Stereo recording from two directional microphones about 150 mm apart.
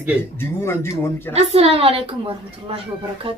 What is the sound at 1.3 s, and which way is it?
Speech, 40° right (ahead or behind).